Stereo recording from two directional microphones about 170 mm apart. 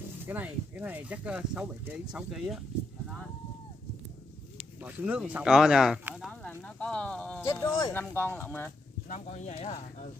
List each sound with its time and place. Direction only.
0.2 s speech: 10° right (ahead or behind)
4.8 s speech: 10° right (ahead or behind)
6.4 s speech: 5° left (ahead or behind)
7.4 s speech: 20° left (ahead or behind)
9.1 s speech: 45° left (ahead or behind)